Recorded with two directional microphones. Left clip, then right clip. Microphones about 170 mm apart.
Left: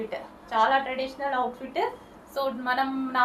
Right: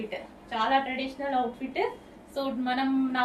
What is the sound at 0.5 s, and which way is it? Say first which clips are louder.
Speech: left 3 dB; 15° right (ahead or behind).